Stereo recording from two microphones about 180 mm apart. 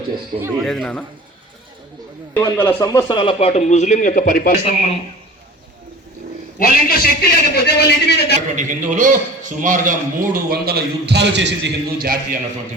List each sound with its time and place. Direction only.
0.3 s speech: 15° right (ahead or behind)
0.6 s a man's voice: centre (ahead or behind)
2.3 s speech: 10° left (ahead or behind); by 4.6 s 50° left (ahead or behind)
6.6 s a man's voice: 55° left (ahead or behind)
8.5 s a man's voice: 45° right (ahead or behind)